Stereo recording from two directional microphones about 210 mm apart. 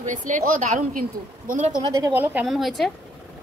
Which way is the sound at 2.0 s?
10° right (ahead or behind).